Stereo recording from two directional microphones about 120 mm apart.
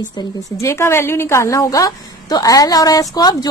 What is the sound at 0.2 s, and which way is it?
Speech, 35° left (ahead or behind).